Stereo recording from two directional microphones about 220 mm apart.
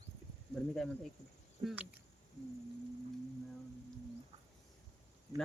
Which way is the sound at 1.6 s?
5° right (ahead or behind).